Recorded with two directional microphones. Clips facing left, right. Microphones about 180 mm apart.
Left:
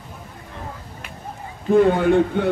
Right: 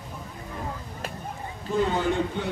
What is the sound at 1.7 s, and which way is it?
Speech, 55° left (ahead or behind).